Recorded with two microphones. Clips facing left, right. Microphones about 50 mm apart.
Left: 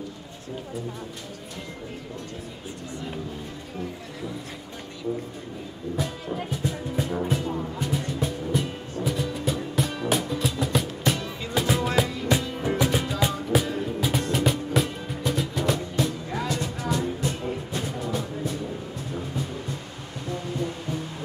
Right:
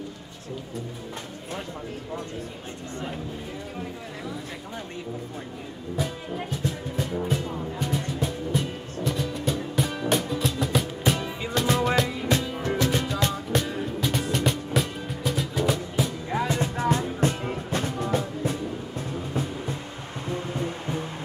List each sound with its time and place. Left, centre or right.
5.9 s music: centre
16.3 s music: right
20.2 s music: right